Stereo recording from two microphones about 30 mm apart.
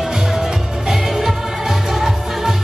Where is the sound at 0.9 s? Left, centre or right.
Centre.